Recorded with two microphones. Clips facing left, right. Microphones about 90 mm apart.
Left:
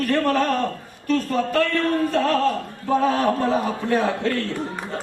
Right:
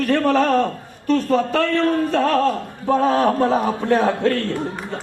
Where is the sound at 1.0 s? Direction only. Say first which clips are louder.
Right 5 dB; 40° right (ahead or behind).